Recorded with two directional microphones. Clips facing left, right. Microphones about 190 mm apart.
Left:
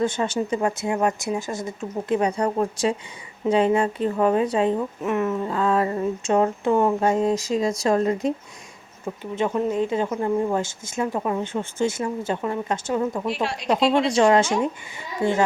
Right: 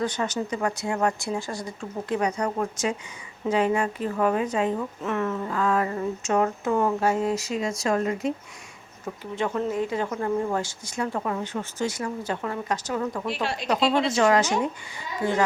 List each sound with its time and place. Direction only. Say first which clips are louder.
0.0 s a woman's voice: left 4 dB; 25° left (ahead or behind)
4.8 s speech: left 4 dB; 15° left (ahead or behind); by 8.3 s 35° left (ahead or behind)
9.3 s speech: left 3 dB; 20° left (ahead or behind)
13.2 s speech: left 3 dB; centre (ahead or behind)
14.1 s speech: left 3 dB; 25° left (ahead or behind)